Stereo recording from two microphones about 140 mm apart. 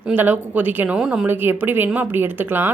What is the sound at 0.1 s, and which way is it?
A woman's voice, 10° right (ahead or behind).